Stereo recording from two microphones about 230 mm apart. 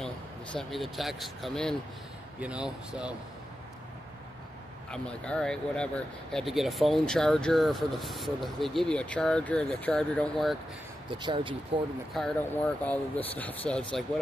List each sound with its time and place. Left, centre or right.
0.0 s speech: centre
4.9 s speech: centre
11.1 s speech: right
12.1 s speech: centre